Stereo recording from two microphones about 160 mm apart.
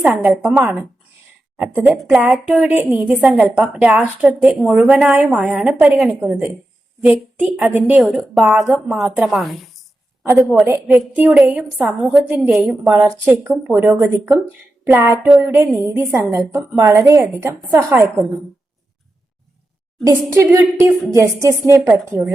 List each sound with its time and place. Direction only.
0.0 s a woman's voice: 5° right (ahead or behind)
1.9 s a woman's voice: 5° right (ahead or behind)
10.7 s a woman's voice: 10° right (ahead or behind)
20.1 s a woman's voice: 15° right (ahead or behind)